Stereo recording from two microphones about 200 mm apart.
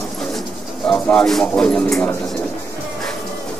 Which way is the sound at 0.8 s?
5° left (ahead or behind).